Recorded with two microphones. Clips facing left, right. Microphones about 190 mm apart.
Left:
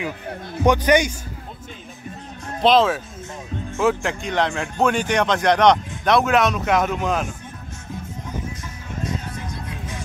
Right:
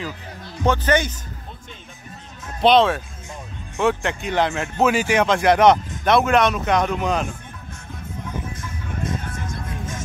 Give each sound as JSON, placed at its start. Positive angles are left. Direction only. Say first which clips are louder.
{"t": 0.3, "sound": "a man's voice", "louder": "left 6 dB", "side_deg": 55}
{"t": 0.7, "sound": "a man's voice", "louder": "left 3 dB", "side_deg": 15}
{"t": 2.6, "sound": "speech", "louder": "right 1 dB", "side_deg": 0}
{"t": 9.0, "sound": "music", "louder": "even", "side_deg": -45}